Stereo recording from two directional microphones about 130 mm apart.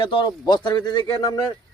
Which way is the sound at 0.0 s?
40° left (ahead or behind).